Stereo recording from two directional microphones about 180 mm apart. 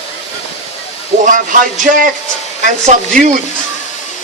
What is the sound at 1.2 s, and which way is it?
Speech, 45° right (ahead or behind).